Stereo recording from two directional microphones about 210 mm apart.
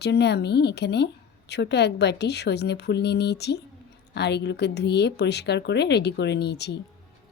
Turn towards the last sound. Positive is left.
turn(degrees=55)  # may be behind; listen again after turning